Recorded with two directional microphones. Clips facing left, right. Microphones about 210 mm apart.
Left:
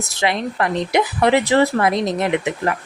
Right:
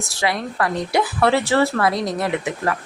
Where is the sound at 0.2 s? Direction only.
20° left (ahead or behind).